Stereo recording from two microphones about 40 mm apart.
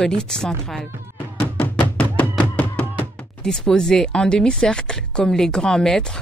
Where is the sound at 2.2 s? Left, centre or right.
Left.